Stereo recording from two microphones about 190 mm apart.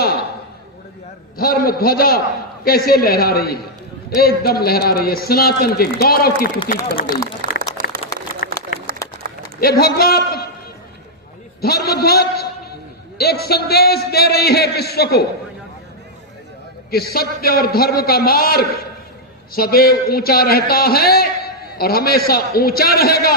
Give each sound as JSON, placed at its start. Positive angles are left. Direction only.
{"t": 1.4, "sound": "a man's voice", "side_deg": 50}
{"t": 7.4, "sound": "a sound", "side_deg": -45}
{"t": 8.4, "sound": "a sound", "side_deg": 50}
{"t": 9.6, "sound": "a man's voice", "side_deg": 55}
{"t": 11.6, "sound": "a man's voice", "side_deg": 55}
{"t": 16.9, "sound": "a man's voice", "side_deg": 55}